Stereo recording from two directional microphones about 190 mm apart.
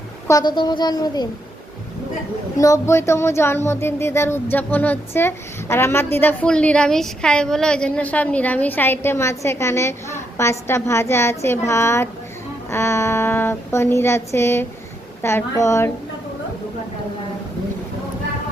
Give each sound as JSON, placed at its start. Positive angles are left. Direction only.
{"t": 0.3, "sound": "speech", "side_deg": 20}
{"t": 2.6, "sound": "a woman's voice", "side_deg": 15}